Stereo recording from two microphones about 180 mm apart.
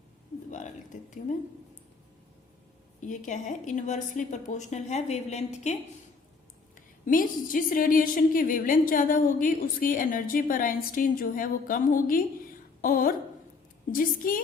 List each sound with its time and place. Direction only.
3.0 s a woman's voice: 45° left (ahead or behind)
6.7 s a woman's voice: 50° left (ahead or behind)